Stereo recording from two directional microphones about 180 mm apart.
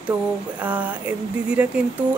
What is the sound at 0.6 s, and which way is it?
Speech, 10° right (ahead or behind).